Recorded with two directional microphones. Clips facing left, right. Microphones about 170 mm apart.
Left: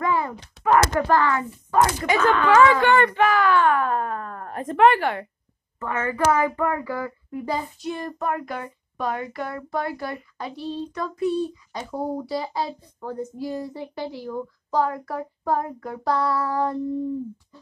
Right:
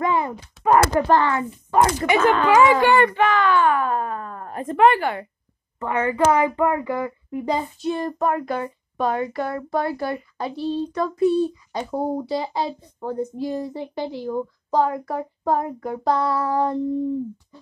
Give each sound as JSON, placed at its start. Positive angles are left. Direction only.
{"t": 0.0, "sound": "thunk", "side_deg": -20}
{"t": 0.9, "sound": "a child's voice", "side_deg": -25}
{"t": 3.2, "sound": "speech", "side_deg": 5}
{"t": 5.8, "sound": "a child's voice", "side_deg": -15}